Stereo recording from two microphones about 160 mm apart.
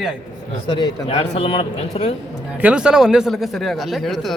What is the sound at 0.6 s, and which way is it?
A man's voice, 30° left (ahead or behind).